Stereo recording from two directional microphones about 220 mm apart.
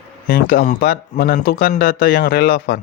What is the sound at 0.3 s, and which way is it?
Speech, 40° left (ahead or behind).